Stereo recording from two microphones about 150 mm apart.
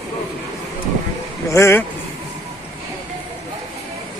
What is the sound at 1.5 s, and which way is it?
Speech, 15° left (ahead or behind).